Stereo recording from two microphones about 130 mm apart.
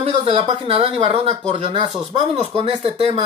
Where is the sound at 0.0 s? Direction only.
55° right (ahead or behind).